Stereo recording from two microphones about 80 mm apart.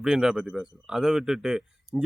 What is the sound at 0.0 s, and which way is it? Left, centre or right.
Speech, centre.